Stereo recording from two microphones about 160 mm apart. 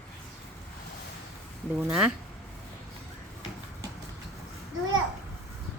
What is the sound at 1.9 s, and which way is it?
Speech, 5° right (ahead or behind).